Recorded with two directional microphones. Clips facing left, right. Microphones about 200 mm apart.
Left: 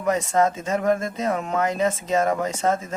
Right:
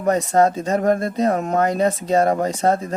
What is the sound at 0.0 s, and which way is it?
Speech, 35° right (ahead or behind).